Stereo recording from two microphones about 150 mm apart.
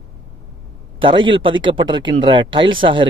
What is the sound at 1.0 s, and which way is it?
A man's voice, 35° right (ahead or behind).